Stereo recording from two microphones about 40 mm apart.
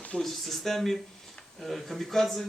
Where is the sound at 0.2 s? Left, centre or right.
Centre.